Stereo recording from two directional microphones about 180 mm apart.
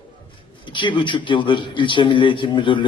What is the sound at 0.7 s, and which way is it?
A man's voice, 25° left (ahead or behind).